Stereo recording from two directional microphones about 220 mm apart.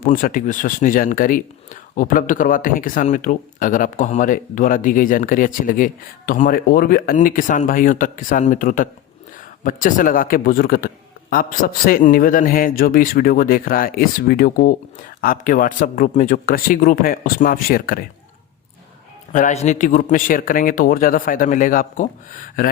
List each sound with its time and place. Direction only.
0.0 s speech: 40° left (ahead or behind)
19.3 s speech: 35° left (ahead or behind)